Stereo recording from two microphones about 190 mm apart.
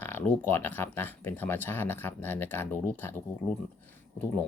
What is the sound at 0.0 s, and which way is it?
Speech, 10° left (ahead or behind).